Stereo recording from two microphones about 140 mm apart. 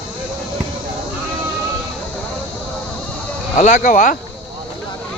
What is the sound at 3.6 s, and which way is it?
Speech, 70° left (ahead or behind).